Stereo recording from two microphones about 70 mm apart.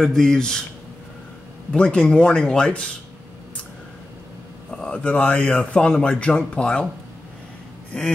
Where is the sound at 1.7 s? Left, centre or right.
Centre.